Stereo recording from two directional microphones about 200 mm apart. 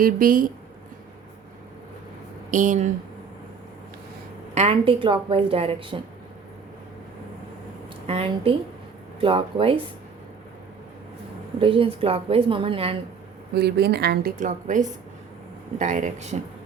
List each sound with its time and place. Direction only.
0.0 s a woman's voice: 45° right (ahead or behind)
2.5 s speech: 40° right (ahead or behind)
4.5 s a woman's voice: 30° right (ahead or behind)
8.0 s a woman's voice: 30° right (ahead or behind)
11.6 s a woman's voice: 25° right (ahead or behind)
13.5 s a woman's voice: 55° right (ahead or behind); by 16.4 s 35° right (ahead or behind)